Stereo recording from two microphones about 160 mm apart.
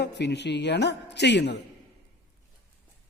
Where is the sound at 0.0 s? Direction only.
90° left.